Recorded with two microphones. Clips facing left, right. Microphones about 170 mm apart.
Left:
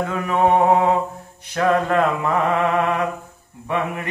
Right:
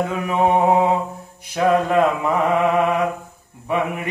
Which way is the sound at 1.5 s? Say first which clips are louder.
Right 1 dB; 10° right (ahead or behind).